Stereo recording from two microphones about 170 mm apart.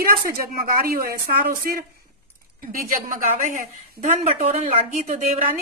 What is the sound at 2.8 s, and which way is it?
A woman's voice, 50° right (ahead or behind).